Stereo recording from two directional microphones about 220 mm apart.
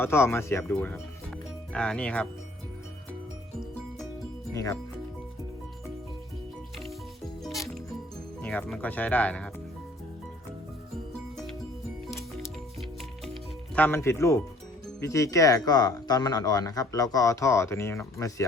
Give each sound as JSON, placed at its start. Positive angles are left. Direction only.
{"t": 0.0, "sound": "speech", "side_deg": 10}
{"t": 4.5, "sound": "speech", "side_deg": 15}
{"t": 7.4, "sound": "music", "side_deg": 0}
{"t": 8.4, "sound": "speech", "side_deg": 5}
{"t": 13.7, "sound": "speech", "side_deg": 10}